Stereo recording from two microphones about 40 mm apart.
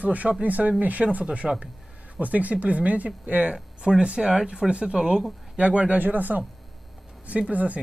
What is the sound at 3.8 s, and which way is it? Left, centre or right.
Speech, right.